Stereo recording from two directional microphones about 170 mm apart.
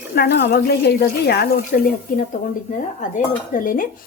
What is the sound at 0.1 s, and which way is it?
Speech, 85° left.